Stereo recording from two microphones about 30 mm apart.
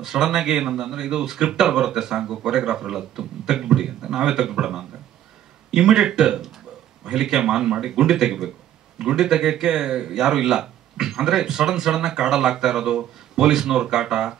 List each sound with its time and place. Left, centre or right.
0.0 s speech: centre